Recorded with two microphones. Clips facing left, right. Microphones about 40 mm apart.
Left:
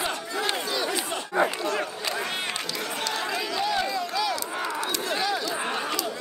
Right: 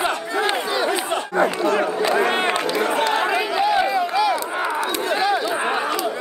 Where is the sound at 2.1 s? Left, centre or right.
Right.